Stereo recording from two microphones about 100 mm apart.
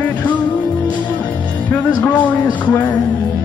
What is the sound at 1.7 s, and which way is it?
Music, 15° left (ahead or behind).